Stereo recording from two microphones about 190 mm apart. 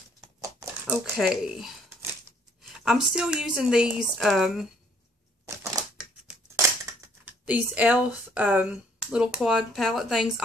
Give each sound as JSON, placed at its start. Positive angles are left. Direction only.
{"t": 0.4, "sound": "crumpling", "side_deg": -15}
{"t": 2.8, "sound": "speech", "side_deg": 0}
{"t": 5.4, "sound": "crushing", "side_deg": -15}
{"t": 6.5, "sound": "speech", "side_deg": -10}